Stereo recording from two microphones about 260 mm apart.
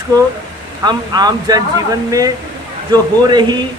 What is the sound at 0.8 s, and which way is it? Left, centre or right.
Speech, centre.